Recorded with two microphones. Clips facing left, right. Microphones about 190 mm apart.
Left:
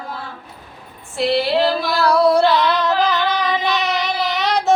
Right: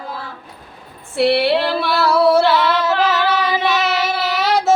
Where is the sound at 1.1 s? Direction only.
60° right (ahead or behind).